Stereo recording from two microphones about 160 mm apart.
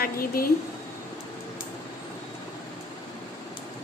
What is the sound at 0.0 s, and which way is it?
Speech, 65° left (ahead or behind).